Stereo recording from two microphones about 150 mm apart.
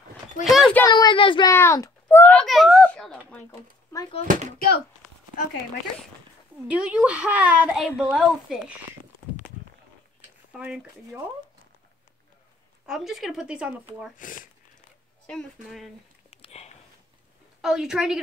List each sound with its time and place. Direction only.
0.4 s speech: centre (ahead or behind)
0.8 s speech: 30° left (ahead or behind)
1.5 s speech: 20° left (ahead or behind)
2.4 s a sound: centre (ahead or behind)
4.2 s speech: 60° right (ahead or behind)
4.6 s speech: 90° left
6.7 s a woman's voice: 10° right (ahead or behind)
10.5 s a woman's voice: 5° right (ahead or behind)
12.8 s speech: centre (ahead or behind)
14.1 s speech: 65° left (ahead or behind)
15.2 s speech: 5° left (ahead or behind)
16.3 s a sound: 40° left (ahead or behind)
17.6 s speech: 5° right (ahead or behind)